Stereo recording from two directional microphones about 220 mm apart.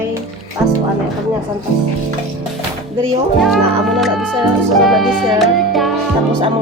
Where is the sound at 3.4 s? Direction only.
Centre (ahead or behind).